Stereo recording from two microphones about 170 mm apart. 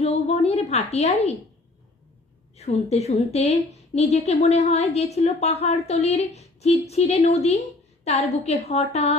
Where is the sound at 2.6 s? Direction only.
40° left (ahead or behind).